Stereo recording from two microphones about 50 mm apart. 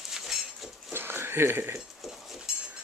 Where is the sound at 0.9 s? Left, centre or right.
Right.